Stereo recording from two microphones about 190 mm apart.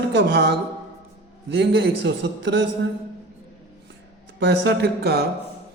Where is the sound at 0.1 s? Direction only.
60° right (ahead or behind).